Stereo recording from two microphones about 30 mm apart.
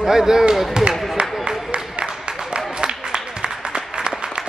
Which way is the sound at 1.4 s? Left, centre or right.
Right.